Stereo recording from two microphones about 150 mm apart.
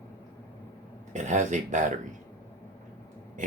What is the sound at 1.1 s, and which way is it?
Speech, 55° right (ahead or behind).